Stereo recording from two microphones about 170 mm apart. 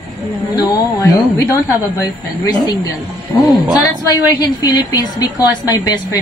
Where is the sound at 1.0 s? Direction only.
20° left (ahead or behind).